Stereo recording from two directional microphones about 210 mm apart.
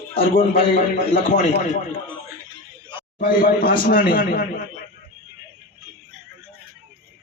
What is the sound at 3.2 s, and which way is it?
A man's voice, 40° left (ahead or behind).